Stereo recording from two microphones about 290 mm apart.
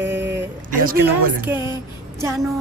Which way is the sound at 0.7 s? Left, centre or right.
Right.